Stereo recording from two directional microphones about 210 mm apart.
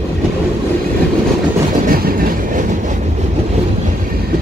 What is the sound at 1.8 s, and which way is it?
Train, 45° right (ahead or behind).